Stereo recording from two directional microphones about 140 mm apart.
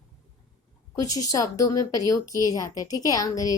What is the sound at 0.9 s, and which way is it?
A woman's voice, 25° left (ahead or behind).